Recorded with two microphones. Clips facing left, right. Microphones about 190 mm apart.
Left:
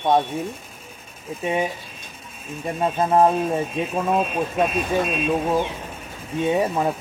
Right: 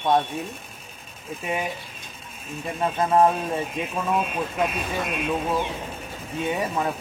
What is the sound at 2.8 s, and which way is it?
Speech, 25° left (ahead or behind).